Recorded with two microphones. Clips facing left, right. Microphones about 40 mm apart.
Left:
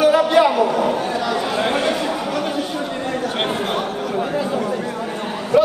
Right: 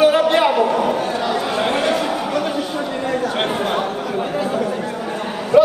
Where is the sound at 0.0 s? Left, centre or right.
Right.